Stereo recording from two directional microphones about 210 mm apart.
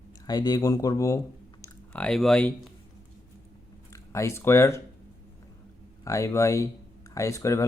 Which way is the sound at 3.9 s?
15° left (ahead or behind).